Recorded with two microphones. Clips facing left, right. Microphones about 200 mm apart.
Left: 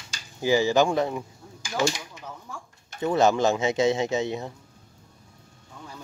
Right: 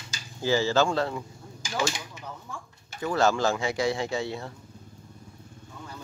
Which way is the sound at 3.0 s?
20° left (ahead or behind).